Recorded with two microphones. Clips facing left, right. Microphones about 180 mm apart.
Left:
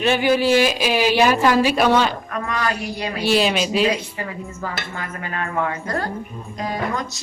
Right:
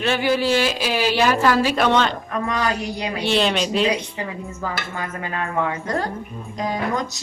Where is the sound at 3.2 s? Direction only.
5° left (ahead or behind).